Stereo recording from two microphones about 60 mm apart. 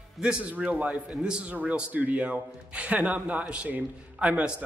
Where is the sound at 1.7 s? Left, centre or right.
Right.